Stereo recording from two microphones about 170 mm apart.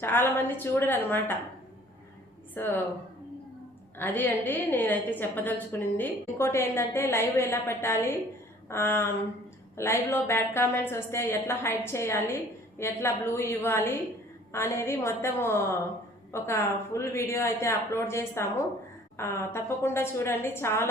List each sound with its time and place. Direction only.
0.0 s a woman's voice: 10° left (ahead or behind)
2.6 s a woman's voice: 10° left (ahead or behind)
3.9 s a woman's voice: 10° left (ahead or behind)